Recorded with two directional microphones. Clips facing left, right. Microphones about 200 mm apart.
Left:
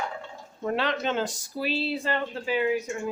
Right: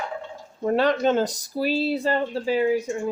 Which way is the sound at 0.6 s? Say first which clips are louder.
Right 7 dB; 40° right (ahead or behind).